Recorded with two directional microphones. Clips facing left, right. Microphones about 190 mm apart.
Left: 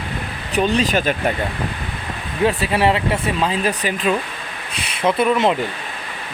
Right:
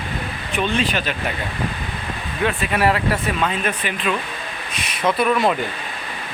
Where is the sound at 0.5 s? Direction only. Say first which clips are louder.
Left 4 dB; 40° left (ahead or behind).